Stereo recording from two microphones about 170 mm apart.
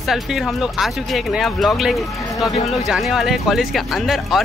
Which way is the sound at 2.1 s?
20° left (ahead or behind).